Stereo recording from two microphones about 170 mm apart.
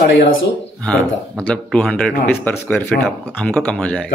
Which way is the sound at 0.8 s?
5° left (ahead or behind).